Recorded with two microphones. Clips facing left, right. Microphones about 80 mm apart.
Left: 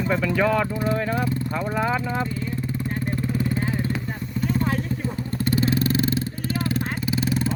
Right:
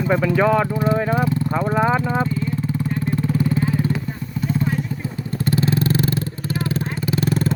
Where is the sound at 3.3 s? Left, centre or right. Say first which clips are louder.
Right 5 dB; centre.